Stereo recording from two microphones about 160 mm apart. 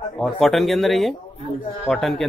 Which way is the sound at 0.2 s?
Centre (ahead or behind).